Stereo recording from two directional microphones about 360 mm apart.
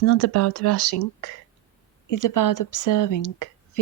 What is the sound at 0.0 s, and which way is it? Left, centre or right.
A woman's voice, left.